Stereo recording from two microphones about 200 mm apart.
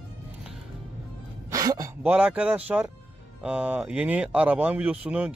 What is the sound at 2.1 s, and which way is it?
Speech, 5° right (ahead or behind).